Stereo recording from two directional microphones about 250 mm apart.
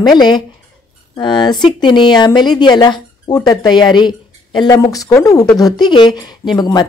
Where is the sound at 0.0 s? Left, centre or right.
Centre.